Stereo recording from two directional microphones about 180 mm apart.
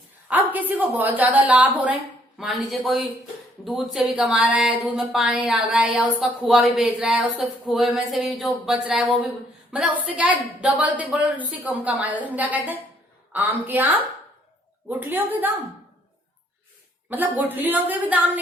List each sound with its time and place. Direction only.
0.3 s a woman's voice: 10° right (ahead or behind)
10.2 s a woman's voice: 5° right (ahead or behind)
14.8 s a woman's voice: 10° right (ahead or behind)
17.1 s a woman's voice: 10° right (ahead or behind)